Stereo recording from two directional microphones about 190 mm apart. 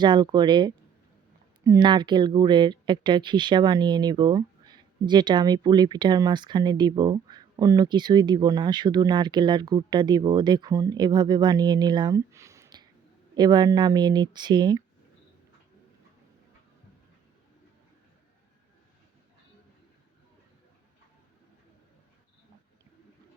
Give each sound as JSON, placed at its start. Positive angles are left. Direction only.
{"t": 0.0, "sound": "speech", "side_deg": -25}